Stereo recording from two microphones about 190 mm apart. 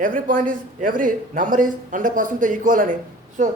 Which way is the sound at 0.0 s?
45° right (ahead or behind).